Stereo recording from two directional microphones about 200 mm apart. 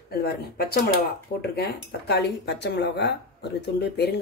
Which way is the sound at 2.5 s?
60° left (ahead or behind).